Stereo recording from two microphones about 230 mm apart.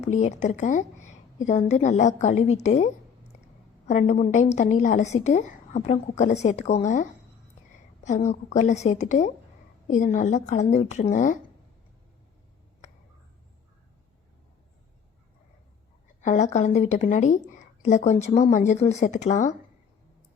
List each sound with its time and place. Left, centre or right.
0.0 s a woman's voice: left
8.3 s a woman's voice: left
16.2 s a woman's voice: left